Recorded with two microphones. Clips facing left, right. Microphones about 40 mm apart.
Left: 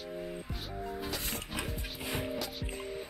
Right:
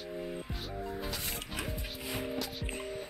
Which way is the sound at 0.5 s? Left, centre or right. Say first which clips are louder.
Even; centre.